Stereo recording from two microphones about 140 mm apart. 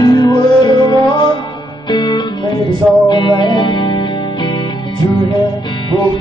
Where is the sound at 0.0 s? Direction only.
30° left (ahead or behind).